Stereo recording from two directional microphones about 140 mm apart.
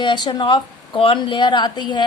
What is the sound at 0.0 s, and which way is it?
A woman's voice, 30° left (ahead or behind).